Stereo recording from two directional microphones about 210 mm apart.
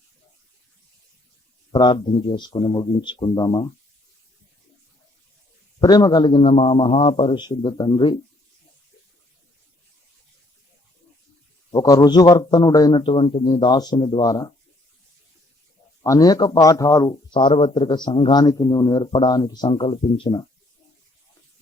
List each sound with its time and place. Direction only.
1.7 s speech: 20° left (ahead or behind)
5.8 s speech: 20° left (ahead or behind)
11.7 s speech: 20° left (ahead or behind)
16.0 s speech: 15° left (ahead or behind)